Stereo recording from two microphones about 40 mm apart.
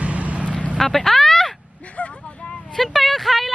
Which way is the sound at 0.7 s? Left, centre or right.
Centre.